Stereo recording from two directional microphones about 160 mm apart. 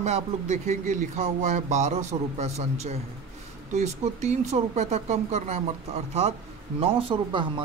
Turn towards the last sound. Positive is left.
turn(degrees=-30)  # may be behind; listen again after turning